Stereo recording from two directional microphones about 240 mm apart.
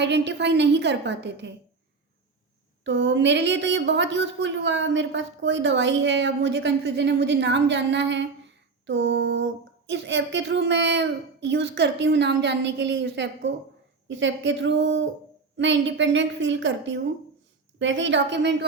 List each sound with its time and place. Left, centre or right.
0.0 s a woman's voice: right
2.8 s a woman's voice: right